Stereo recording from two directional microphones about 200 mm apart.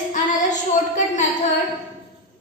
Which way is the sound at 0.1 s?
40° left (ahead or behind).